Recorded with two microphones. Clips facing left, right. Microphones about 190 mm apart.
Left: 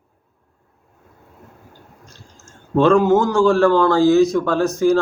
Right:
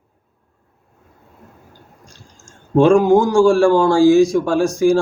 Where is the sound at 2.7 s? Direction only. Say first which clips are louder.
Right 2 dB; 15° right (ahead or behind).